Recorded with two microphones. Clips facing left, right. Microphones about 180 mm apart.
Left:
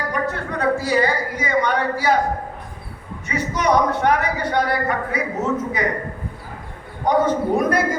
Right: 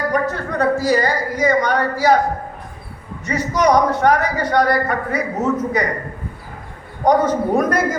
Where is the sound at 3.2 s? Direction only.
40° right (ahead or behind).